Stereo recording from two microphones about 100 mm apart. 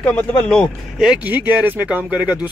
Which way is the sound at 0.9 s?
5° right (ahead or behind).